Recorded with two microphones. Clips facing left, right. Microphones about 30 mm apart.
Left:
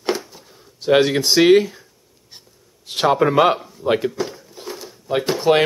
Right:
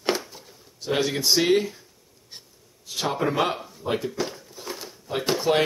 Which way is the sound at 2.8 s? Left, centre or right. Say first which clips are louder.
Left 10 dB; left.